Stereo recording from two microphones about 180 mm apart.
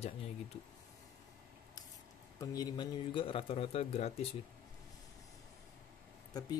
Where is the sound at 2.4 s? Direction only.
20° left (ahead or behind); by 4.1 s 35° left (ahead or behind).